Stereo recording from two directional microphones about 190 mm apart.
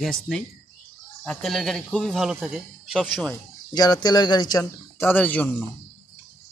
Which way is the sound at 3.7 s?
20° left (ahead or behind).